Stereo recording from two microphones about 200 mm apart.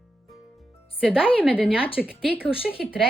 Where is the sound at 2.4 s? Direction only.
30° left (ahead or behind).